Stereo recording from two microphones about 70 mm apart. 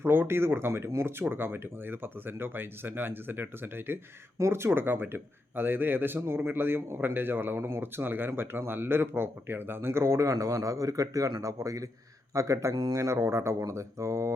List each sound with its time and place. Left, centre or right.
0.0 s speech: right
12.7 s speech: right
13.0 s speech: right